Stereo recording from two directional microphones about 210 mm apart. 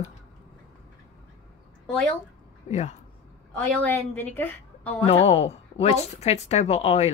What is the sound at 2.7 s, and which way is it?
Speech, 35° left (ahead or behind).